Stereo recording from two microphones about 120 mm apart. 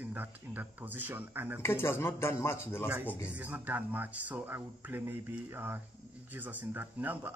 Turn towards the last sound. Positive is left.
turn(degrees=-15)  # may be behind; listen again after turning